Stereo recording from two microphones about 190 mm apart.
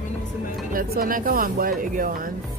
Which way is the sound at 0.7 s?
50° right (ahead or behind).